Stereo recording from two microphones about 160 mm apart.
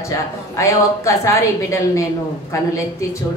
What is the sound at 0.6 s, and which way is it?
Speech, 20° left (ahead or behind).